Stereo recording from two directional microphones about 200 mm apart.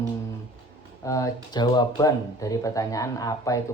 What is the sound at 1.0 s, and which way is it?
Speech, 15° left (ahead or behind).